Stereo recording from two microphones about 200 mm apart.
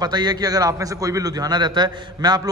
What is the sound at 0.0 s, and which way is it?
A man's voice, 20° right (ahead or behind).